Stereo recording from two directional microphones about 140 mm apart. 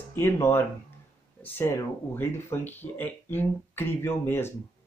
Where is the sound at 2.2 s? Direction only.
15° left (ahead or behind).